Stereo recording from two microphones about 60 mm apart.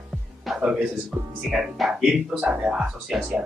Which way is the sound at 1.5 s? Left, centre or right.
Centre.